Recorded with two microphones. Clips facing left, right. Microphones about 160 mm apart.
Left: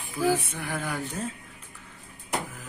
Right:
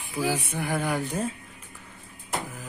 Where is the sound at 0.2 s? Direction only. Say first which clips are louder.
Left 2 dB; 15° right (ahead or behind).